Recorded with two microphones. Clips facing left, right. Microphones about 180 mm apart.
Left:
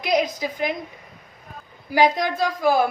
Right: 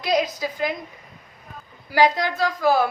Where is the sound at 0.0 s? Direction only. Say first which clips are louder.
Left 1 dB; 15° left (ahead or behind).